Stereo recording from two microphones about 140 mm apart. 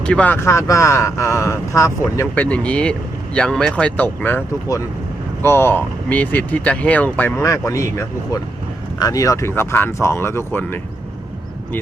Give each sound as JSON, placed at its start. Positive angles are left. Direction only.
{"t": 0.0, "sound": "speech", "side_deg": 10}